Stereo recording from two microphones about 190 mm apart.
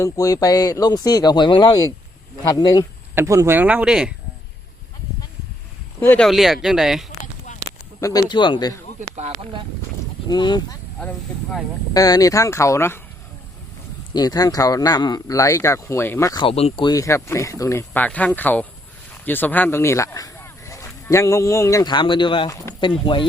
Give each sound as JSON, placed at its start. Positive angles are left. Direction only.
{"t": 0.0, "sound": "speech", "side_deg": 20}
{"t": 3.2, "sound": "speech", "side_deg": -15}
{"t": 6.0, "sound": "speech", "side_deg": 10}
{"t": 8.0, "sound": "speech", "side_deg": 20}
{"t": 9.0, "sound": "speech", "side_deg": -35}
{"t": 10.2, "sound": "speech", "side_deg": 25}
{"t": 11.9, "sound": "speech", "side_deg": 20}
{"t": 14.1, "sound": "speech", "side_deg": 20}